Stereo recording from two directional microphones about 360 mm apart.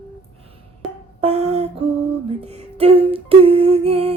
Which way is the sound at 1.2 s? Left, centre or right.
Centre.